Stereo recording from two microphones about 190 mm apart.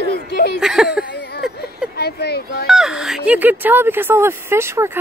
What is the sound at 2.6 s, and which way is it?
Speech, centre (ahead or behind).